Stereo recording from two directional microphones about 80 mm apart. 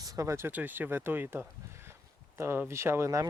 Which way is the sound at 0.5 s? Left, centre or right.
Right.